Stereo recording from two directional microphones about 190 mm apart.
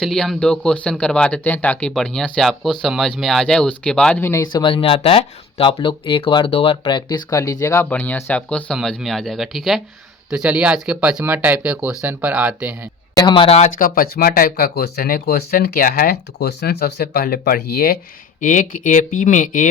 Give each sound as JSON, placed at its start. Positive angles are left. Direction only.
{"t": 0.0, "sound": "speech", "side_deg": 0}
{"t": 13.1, "sound": "speech", "side_deg": 25}
{"t": 13.7, "sound": "speech", "side_deg": 45}